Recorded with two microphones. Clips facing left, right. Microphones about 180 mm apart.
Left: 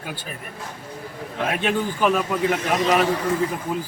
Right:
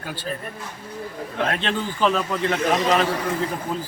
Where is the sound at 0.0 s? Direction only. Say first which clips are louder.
Right 4 dB; 15° left (ahead or behind).